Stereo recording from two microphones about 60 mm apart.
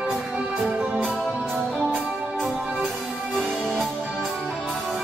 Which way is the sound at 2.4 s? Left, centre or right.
Centre.